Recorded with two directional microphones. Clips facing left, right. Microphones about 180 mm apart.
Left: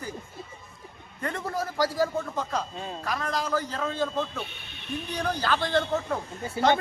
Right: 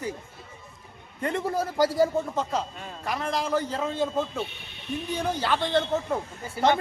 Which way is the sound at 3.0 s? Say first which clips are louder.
Right 2 dB; 20° right (ahead or behind).